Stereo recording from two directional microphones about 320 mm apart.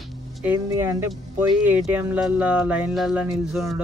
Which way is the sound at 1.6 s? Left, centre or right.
Centre.